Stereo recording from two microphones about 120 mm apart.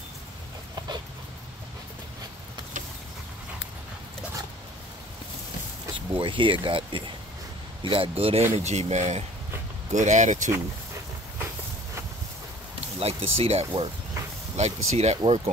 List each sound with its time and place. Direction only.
5.9 s speech: 45° right (ahead or behind)
8.5 s speech: 65° right (ahead or behind)
9.9 s speech: 90° right
13.0 s speech: 60° right (ahead or behind)